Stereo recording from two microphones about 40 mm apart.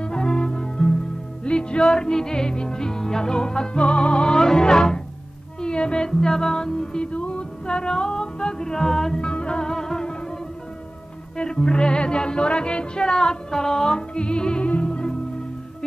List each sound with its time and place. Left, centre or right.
0.0 s music: centre
9.2 s music: left
11.3 s music: left